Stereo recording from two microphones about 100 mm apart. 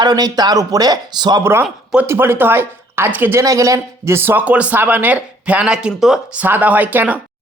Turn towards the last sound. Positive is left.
turn(degrees=-20)  # may be behind; listen again after turning